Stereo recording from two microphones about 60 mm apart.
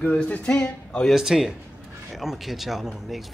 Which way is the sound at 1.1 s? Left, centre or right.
Centre.